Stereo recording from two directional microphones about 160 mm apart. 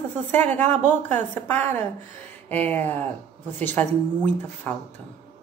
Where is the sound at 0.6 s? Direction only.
45° right (ahead or behind).